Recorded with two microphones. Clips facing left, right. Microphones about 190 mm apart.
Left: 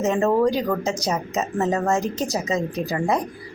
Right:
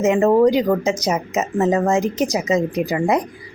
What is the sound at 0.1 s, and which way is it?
A woman's voice, 20° right (ahead or behind).